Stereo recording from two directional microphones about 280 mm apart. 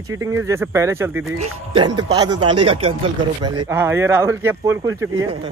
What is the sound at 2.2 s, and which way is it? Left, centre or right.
Speech, right.